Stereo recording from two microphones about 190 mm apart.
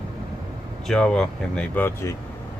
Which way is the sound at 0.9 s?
5° left (ahead or behind).